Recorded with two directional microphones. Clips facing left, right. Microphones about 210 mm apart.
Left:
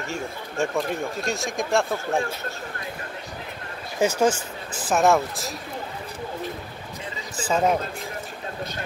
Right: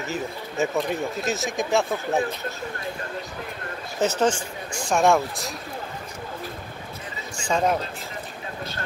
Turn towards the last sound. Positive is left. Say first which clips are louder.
# left 1 dB
turn(degrees=5)  # may be behind; listen again after turning